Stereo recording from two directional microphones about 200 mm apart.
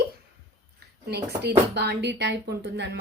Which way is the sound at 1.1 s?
55° right (ahead or behind).